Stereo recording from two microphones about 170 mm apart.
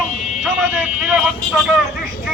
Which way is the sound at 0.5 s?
Centre (ahead or behind).